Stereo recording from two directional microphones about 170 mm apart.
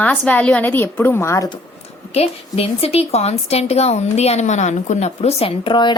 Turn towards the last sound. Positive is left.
turn(degrees=30)  # may be behind; listen again after turning